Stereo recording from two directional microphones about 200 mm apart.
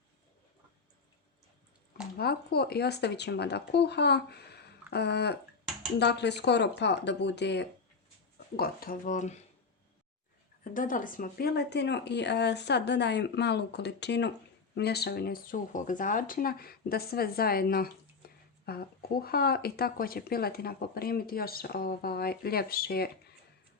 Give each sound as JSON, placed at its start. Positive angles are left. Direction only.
{"t": 2.1, "sound": "speech", "side_deg": 50}
{"t": 8.5, "sound": "speech", "side_deg": 45}
{"t": 10.6, "sound": "speech", "side_deg": 40}